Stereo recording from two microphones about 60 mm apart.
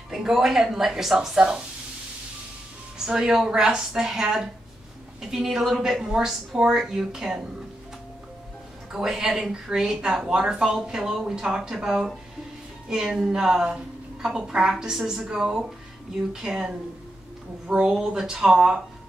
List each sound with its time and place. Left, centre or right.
0.1 s a woman's voice: centre
3.1 s a woman's voice: centre
8.9 s a woman's voice: centre
17.8 s a woman's voice: centre